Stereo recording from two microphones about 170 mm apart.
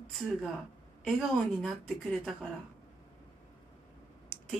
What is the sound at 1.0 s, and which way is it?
A woman's voice, centre (ahead or behind).